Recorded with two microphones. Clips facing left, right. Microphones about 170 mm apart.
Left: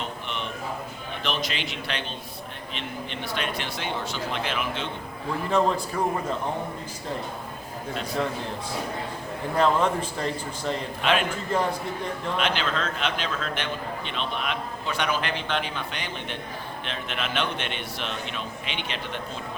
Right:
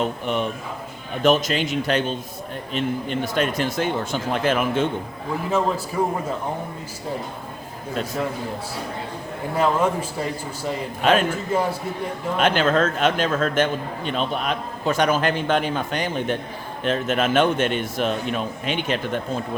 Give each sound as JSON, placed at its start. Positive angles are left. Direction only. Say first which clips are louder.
{"t": 0.0, "sound": "a man's voice", "louder": "right 10 dB", "side_deg": -45}
{"t": 5.5, "sound": "a man's voice", "louder": "even", "side_deg": -5}
{"t": 9.6, "sound": "a man's voice", "louder": "right 2 dB", "side_deg": -10}
{"t": 11.0, "sound": "a man's voice", "louder": "right 6 dB", "side_deg": -45}
{"t": 11.5, "sound": "a man's voice", "louder": "right 3 dB", "side_deg": -10}
{"t": 12.4, "sound": "a man's voice", "louder": "right 10 dB", "side_deg": -45}